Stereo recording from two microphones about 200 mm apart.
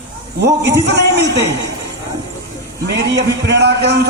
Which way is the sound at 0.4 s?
55° right (ahead or behind).